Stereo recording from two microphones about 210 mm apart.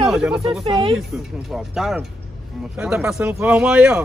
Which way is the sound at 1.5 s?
Centre (ahead or behind).